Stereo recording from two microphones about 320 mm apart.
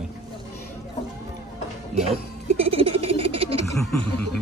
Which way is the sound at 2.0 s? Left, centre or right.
Centre.